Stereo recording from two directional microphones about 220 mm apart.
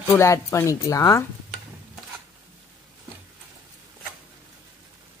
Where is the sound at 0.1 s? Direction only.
15° left (ahead or behind).